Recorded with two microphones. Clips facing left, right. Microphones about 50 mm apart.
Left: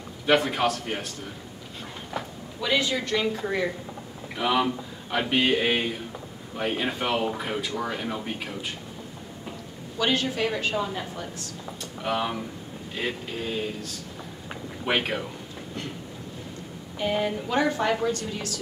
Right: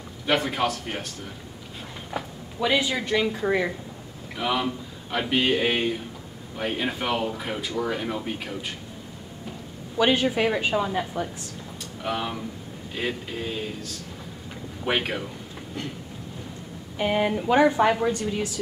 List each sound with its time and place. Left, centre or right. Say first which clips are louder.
0.3 s speech: left 2 dB; centre
2.1 s speech: right 3 dB; centre
4.4 s speech: left 2 dB; centre
9.9 s a woman's voice: right 4 dB; centre
12.0 s speech: left 1 dB; centre
14.9 s speech: even; centre
17.0 s a woman's voice: right 3 dB; right